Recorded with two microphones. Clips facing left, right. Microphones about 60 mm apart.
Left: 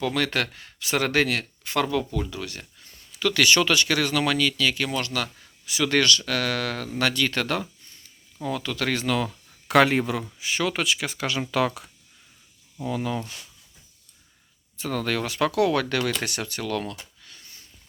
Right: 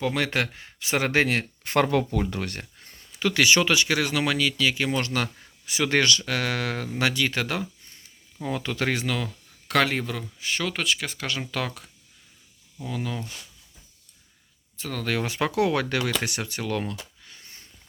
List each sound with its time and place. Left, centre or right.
0.0 s speech: centre; by 2.9 s right
3.1 s speech: right; by 7.7 s centre
8.4 s speech: right
9.0 s speech: centre
9.6 s speech: centre
14.8 s speech: centre
15.2 s speech: centre
17.2 s sniff: right